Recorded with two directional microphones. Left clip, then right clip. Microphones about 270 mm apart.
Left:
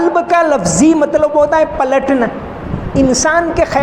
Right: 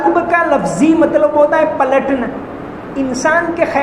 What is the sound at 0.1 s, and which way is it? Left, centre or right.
A woman's voice, left.